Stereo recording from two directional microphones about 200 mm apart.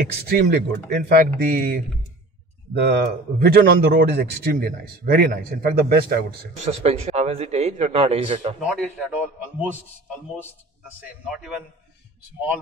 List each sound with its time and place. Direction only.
0.3 s speech: 50° right (ahead or behind)
6.6 s speech: 30° right (ahead or behind)
8.5 s a man's voice: 5° right (ahead or behind)
11.2 s a man's voice: 5° right (ahead or behind)